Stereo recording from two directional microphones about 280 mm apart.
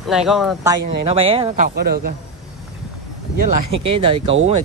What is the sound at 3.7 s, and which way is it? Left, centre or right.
Speech, centre.